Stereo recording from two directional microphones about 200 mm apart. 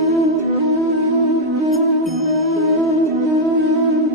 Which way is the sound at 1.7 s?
Centre (ahead or behind).